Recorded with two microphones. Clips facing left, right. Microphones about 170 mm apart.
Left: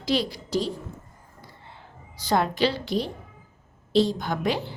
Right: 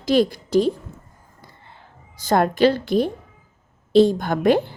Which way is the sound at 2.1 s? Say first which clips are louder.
Right 5 dB; 50° right (ahead or behind).